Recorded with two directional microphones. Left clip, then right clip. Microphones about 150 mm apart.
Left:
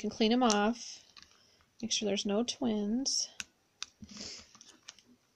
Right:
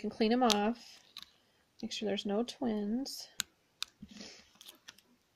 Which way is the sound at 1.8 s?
5° left (ahead or behind).